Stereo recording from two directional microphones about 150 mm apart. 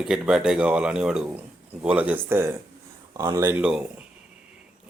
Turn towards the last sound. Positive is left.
turn(degrees=-5)  # may be behind; listen again after turning